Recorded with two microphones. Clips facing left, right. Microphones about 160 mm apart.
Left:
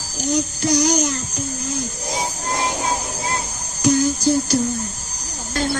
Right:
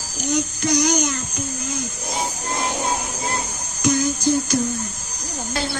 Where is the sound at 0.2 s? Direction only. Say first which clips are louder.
Left 2 dB; 35° left (ahead or behind).